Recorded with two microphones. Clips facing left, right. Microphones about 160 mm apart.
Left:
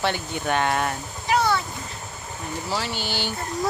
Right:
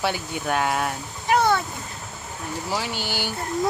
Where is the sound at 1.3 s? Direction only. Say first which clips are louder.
Right 2 dB; 50° right (ahead or behind).